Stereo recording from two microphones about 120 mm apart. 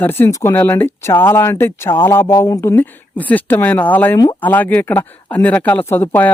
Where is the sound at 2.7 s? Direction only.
15° left (ahead or behind).